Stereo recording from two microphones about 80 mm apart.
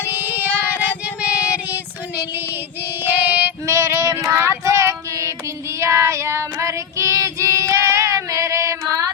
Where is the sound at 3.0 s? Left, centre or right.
Right.